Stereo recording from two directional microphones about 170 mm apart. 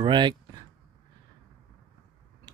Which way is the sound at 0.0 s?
25° right (ahead or behind).